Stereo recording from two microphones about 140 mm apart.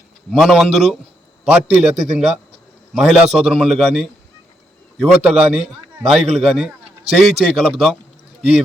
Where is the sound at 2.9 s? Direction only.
5° right (ahead or behind).